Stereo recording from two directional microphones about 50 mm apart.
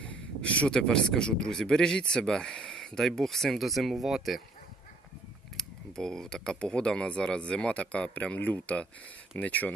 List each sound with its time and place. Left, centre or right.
0.0 s speech: left; by 4.4 s centre
5.5 s speech: centre; by 9.7 s left